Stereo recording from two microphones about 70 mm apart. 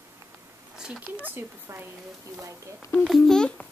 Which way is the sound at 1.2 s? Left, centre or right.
Right.